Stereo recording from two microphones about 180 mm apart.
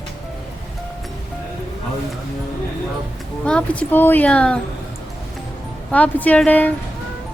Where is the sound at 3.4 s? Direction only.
5° left (ahead or behind).